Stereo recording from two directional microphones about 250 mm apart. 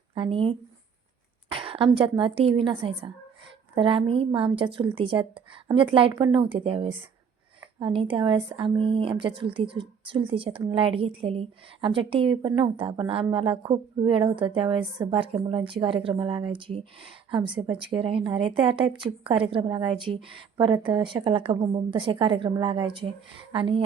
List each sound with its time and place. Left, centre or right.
0.1 s speech: right
1.5 s a sound: right
2.0 s a woman's voice: right